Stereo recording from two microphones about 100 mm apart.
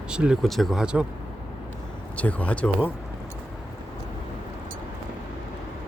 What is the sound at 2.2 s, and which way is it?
Speech, 15° left (ahead or behind).